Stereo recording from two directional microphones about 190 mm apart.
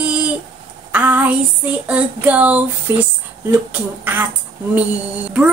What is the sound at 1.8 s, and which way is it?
Music, 5° right (ahead or behind).